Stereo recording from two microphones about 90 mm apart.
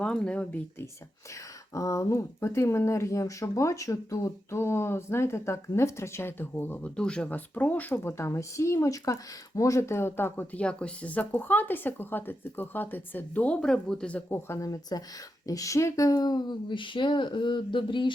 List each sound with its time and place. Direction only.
0.0 s speech: 10° left (ahead or behind)
1.7 s speech: 35° left (ahead or behind)
6.9 s speech: 10° left (ahead or behind)
10.6 s a woman's voice: 10° left (ahead or behind)
14.3 s speech: 25° left (ahead or behind)
14.6 s speech: 40° left (ahead or behind); by 18.1 s 65° left (ahead or behind)